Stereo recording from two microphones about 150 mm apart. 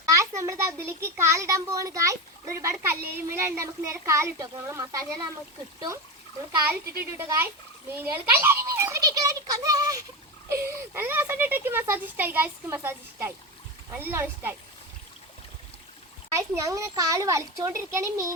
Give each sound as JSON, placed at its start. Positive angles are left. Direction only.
{"t": 0.0, "sound": "a child's voice", "side_deg": -20}
{"t": 7.0, "sound": "a child's voice", "side_deg": -15}
{"t": 16.3, "sound": "a child's voice", "side_deg": -20}